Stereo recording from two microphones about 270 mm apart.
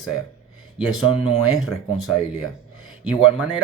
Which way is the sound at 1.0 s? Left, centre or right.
Centre.